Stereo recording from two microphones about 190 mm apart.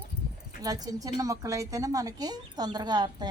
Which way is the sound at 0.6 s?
20° right (ahead or behind).